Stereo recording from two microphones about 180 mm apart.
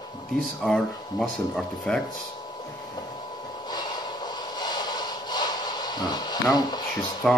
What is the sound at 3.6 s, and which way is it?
Snort, 25° left (ahead or behind).